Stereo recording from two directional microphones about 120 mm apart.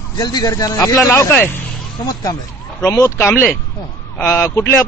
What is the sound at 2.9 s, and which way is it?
A man's voice, 25° left (ahead or behind).